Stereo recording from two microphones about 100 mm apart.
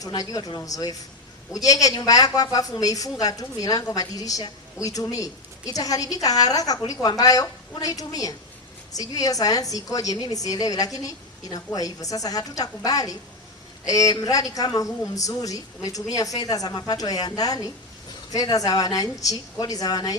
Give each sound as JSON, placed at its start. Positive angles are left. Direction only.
{"t": 0.0, "sound": "a woman's voice", "side_deg": 40}